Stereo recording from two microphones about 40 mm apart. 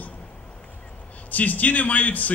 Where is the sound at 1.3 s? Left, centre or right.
Left.